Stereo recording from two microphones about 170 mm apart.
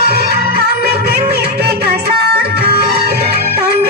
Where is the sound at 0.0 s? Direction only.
70° right (ahead or behind).